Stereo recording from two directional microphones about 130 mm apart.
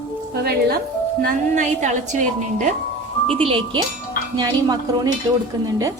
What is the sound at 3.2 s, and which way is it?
Speech, 45° right (ahead or behind).